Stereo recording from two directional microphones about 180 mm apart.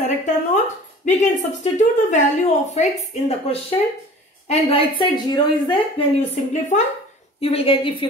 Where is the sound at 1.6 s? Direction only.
40° left (ahead or behind); by 5.4 s 25° left (ahead or behind).